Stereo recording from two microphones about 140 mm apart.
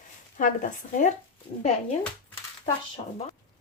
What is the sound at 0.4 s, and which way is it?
Speech, 65° left (ahead or behind).